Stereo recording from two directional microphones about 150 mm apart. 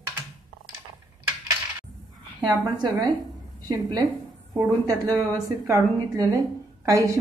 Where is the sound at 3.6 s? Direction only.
25° right (ahead or behind).